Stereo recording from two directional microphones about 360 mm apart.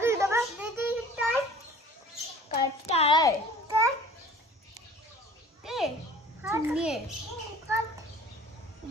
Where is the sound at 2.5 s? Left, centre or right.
Centre.